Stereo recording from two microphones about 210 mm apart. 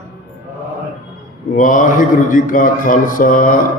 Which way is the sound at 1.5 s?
40° left (ahead or behind).